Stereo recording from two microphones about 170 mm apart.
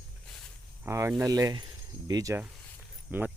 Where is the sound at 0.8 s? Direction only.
15° right (ahead or behind).